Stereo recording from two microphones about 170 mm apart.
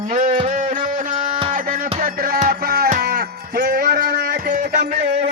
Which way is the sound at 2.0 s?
60° right (ahead or behind).